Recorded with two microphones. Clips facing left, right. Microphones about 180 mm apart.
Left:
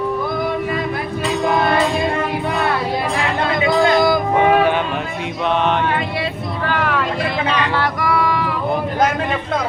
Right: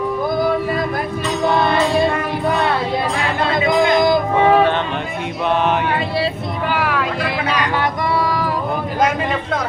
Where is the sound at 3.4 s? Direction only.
20° right (ahead or behind).